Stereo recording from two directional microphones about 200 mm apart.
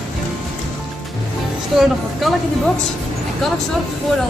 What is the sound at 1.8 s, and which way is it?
Speech, centre (ahead or behind).